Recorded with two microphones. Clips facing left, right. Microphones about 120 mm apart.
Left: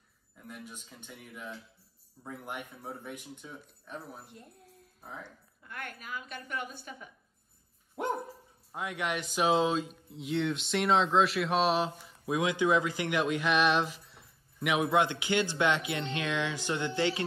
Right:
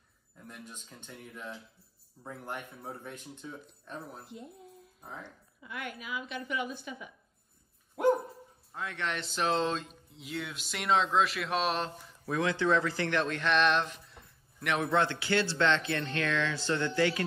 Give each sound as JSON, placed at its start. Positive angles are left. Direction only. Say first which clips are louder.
{"t": 0.5, "sound": "speech", "louder": "left 2 dB", "side_deg": 10}
{"t": 5.7, "sound": "a woman's voice", "louder": "right 2 dB", "side_deg": 45}
{"t": 8.7, "sound": "speech", "louder": "left 2 dB", "side_deg": 15}
{"t": 12.3, "sound": "speech", "louder": "left 1 dB", "side_deg": 15}